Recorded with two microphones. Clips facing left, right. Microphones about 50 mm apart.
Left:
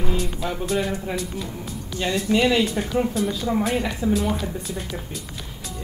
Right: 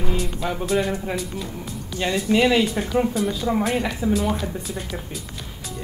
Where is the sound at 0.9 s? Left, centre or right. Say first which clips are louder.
Right 1 dB; centre.